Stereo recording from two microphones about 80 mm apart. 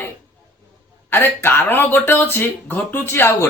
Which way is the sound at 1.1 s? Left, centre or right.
Left.